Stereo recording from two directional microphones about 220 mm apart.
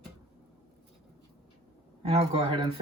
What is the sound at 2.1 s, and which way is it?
Speech, 25° right (ahead or behind).